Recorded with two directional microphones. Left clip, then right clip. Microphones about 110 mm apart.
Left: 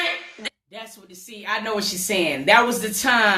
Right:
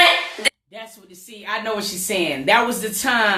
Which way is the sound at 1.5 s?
10° left (ahead or behind).